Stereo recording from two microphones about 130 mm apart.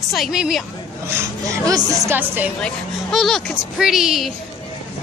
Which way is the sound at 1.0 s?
20° right (ahead or behind).